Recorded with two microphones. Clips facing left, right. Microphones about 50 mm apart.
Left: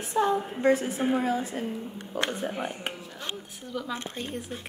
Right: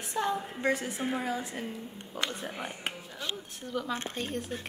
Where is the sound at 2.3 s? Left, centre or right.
Left.